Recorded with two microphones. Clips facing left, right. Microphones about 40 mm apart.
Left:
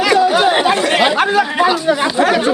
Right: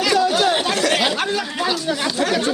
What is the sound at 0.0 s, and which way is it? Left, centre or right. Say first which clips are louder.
Speech: left 5 dB; centre.